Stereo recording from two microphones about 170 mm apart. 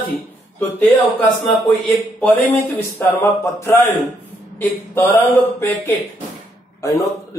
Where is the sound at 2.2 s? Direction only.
10° left (ahead or behind).